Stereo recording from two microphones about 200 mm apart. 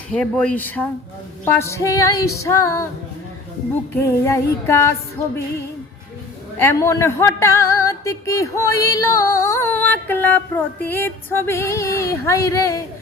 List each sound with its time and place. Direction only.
0.1 s speech: 5° left (ahead or behind)
1.5 s music: 15° left (ahead or behind)
3.9 s music: 15° left (ahead or behind)
6.6 s music: 15° left (ahead or behind)